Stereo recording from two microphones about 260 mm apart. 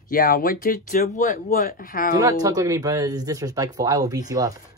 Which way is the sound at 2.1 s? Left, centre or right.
Centre.